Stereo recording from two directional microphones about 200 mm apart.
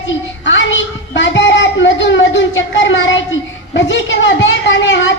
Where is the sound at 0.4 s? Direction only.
65° left (ahead or behind).